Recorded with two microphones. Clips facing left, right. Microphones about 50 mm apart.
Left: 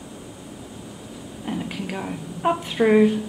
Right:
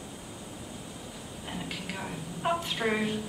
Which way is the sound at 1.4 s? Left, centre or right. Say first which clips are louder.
Left 9 dB; centre.